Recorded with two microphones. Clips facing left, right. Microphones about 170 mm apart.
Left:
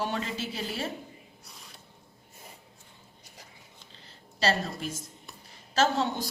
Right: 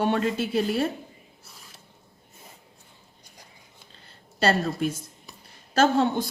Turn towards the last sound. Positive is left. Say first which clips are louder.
# right 5 dB
turn(degrees=-55)  # may be behind; listen again after turning